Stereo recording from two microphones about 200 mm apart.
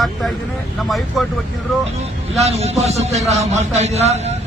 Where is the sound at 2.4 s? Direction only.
30° right (ahead or behind).